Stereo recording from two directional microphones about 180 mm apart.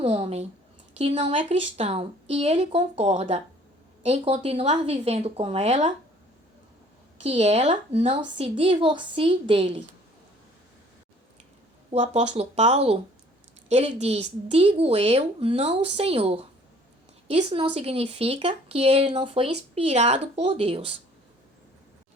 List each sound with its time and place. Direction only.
0.0 s speech: 35° right (ahead or behind)
7.2 s a woman's voice: 40° right (ahead or behind)
11.9 s speech: 35° right (ahead or behind)